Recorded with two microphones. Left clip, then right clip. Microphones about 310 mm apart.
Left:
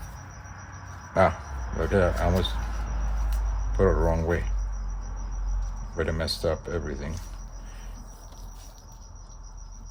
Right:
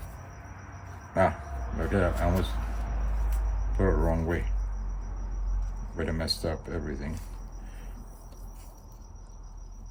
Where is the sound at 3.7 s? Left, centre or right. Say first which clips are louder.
Left 5 dB; left.